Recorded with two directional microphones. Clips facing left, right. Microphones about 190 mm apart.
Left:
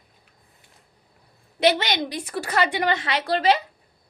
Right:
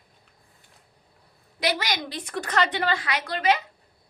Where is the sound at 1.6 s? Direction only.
25° left (ahead or behind).